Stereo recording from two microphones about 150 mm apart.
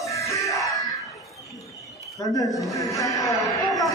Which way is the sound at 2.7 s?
20° left (ahead or behind).